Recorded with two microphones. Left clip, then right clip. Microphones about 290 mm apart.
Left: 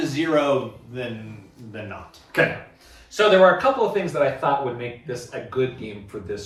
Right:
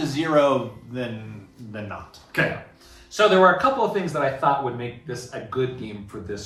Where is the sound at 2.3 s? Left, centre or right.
Centre.